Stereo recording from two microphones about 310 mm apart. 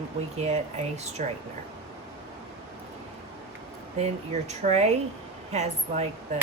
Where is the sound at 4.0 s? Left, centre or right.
Right.